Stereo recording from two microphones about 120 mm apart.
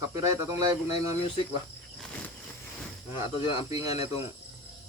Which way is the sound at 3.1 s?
45° left (ahead or behind).